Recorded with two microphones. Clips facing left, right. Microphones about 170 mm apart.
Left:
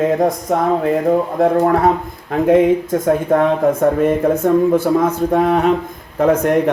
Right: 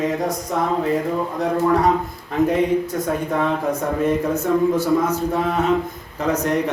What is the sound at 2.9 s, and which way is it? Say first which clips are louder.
A man's voice: left 8 dB; 50° left (ahead or behind).